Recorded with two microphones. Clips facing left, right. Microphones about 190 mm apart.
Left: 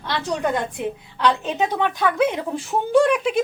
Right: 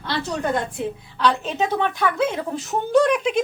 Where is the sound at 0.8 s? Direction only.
15° left (ahead or behind).